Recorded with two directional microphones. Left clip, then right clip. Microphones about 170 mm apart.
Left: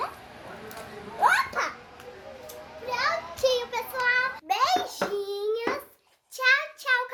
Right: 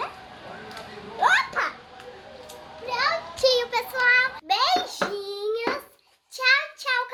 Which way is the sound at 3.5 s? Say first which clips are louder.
Right 4 dB; 35° right (ahead or behind).